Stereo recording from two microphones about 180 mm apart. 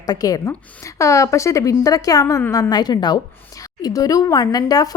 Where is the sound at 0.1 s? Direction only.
20° left (ahead or behind).